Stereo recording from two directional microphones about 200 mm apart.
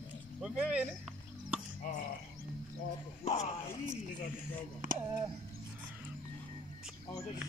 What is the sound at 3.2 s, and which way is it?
Speech, 30° left (ahead or behind).